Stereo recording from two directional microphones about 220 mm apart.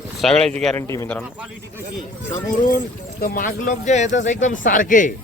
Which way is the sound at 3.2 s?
40° left (ahead or behind).